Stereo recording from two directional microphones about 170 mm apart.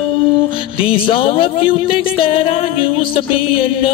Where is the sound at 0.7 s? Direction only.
30° left (ahead or behind).